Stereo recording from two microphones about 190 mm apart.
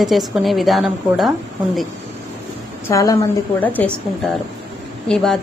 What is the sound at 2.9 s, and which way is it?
Speech, 15° left (ahead or behind).